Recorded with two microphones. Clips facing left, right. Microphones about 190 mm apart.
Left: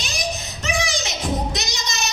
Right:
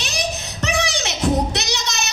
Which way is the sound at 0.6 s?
65° right (ahead or behind).